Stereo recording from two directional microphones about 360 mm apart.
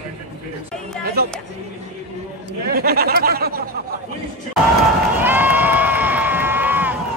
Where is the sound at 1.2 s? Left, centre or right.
Right.